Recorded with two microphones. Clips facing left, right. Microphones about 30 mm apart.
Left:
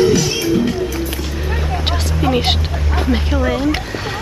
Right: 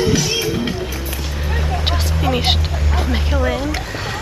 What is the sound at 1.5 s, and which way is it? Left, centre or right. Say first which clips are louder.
Vehicle: even; centre.